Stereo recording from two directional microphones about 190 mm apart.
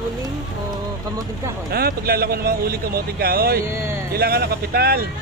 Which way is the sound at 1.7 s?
55° right (ahead or behind).